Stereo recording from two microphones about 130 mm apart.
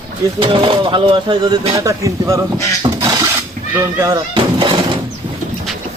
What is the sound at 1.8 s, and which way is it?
Speech, 25° right (ahead or behind).